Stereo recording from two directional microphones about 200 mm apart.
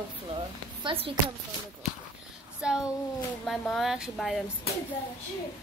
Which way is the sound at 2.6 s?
5° right (ahead or behind).